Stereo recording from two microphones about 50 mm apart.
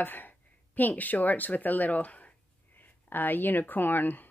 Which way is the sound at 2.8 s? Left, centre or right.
Left.